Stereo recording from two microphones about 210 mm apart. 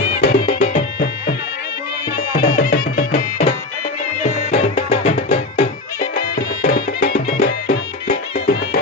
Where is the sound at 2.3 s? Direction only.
40° left (ahead or behind).